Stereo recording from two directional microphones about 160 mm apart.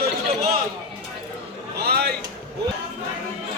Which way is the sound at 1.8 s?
85° right.